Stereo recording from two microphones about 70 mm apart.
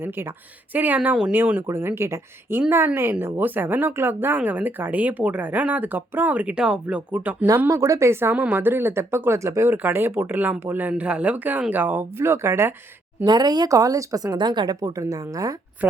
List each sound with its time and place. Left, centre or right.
0.7 s speech: right
7.7 s speech: right
8.3 s speech: right
9.7 s speech: right
12.2 s speech: right
13.2 s speech: right
13.7 s speech: right
14.9 s speech: right
15.8 s speech: right